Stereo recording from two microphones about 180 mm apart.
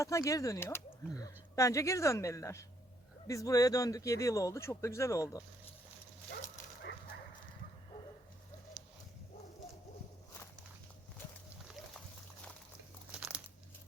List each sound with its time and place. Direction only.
0.0 s speech: 15° left (ahead or behind)
13.1 s crumpling: 5° right (ahead or behind)